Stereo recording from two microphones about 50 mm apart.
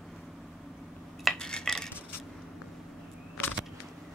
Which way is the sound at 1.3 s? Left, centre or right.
Centre.